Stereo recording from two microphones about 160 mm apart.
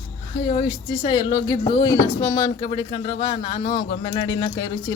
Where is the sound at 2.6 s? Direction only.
30° left (ahead or behind).